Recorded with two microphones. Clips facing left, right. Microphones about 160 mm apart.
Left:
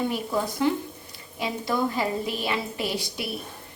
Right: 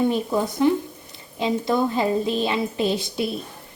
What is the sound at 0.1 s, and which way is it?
A woman's voice, 20° right (ahead or behind).